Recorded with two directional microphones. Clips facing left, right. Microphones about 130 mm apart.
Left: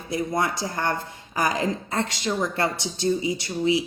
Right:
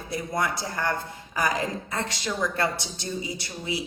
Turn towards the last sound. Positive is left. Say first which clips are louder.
# left 9 dB
turn(degrees=20)  # may be behind; listen again after turning